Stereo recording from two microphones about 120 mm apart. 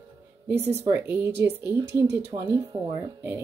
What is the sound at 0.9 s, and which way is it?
Speech, 15° right (ahead or behind).